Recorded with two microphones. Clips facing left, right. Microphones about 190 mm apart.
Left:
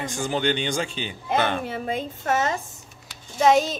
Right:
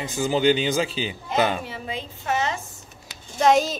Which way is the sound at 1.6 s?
50° left (ahead or behind).